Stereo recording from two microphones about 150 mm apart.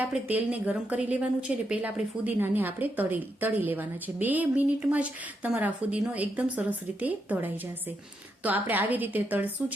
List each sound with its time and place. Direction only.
0.1 s a woman's voice: 10° right (ahead or behind)